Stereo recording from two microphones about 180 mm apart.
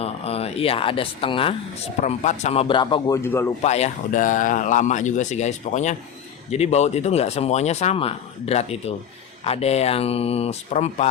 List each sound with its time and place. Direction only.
0.0 s a man's voice: 35° left (ahead or behind); by 3.5 s 15° left (ahead or behind)
3.6 s speech: 40° left (ahead or behind)